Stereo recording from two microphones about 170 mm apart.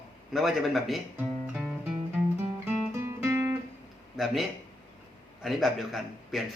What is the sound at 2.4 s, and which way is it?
Music, 15° right (ahead or behind).